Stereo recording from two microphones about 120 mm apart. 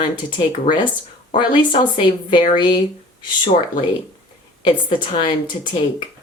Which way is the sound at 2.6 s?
40° left (ahead or behind).